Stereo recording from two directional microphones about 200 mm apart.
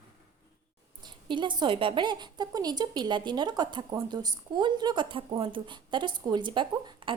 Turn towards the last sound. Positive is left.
turn(degrees=-25)  # may be behind; listen again after turning